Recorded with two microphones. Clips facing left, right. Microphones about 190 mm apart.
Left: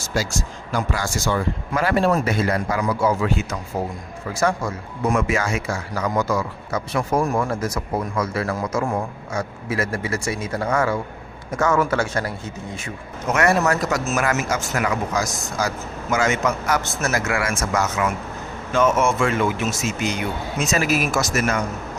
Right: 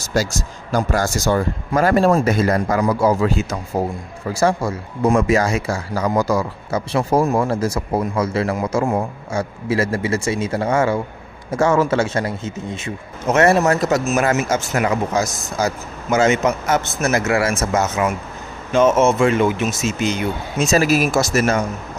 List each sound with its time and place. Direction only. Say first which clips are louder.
0.0 s speech: right 4 dB; 40° right (ahead or behind)